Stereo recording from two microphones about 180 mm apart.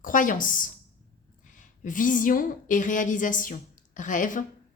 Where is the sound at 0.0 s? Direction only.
50° left (ahead or behind).